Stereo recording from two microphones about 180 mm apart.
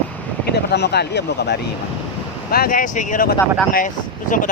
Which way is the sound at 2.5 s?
55° left (ahead or behind).